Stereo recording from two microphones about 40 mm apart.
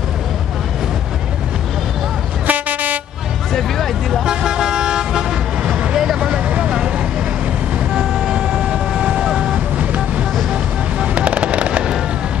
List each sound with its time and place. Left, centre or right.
2.4 s vehicle: right
3.5 s music: centre
4.3 s toot: right
6.1 s vehicle: right
7.9 s vehicle: centre
9.8 s vehicle: right
10.5 s fireworks: right